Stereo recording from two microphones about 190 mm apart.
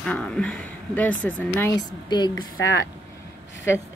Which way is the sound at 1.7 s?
20° left (ahead or behind).